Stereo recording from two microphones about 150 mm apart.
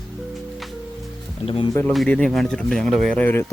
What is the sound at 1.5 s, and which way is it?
Speech, 35° left (ahead or behind).